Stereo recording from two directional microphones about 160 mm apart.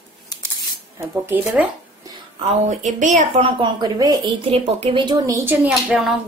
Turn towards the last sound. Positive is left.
turn(degrees=0)  # may be behind; listen again after turning